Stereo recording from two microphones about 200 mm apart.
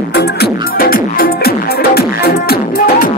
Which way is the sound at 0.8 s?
45° left (ahead or behind).